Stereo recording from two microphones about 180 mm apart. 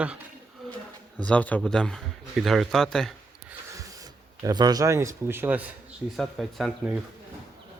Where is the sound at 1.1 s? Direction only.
5° left (ahead or behind).